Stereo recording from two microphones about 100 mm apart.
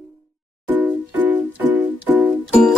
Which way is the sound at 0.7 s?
20° right (ahead or behind).